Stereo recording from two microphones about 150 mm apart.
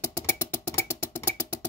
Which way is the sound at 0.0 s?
20° left (ahead or behind).